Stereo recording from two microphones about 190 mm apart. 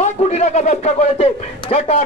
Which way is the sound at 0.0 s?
35° left (ahead or behind).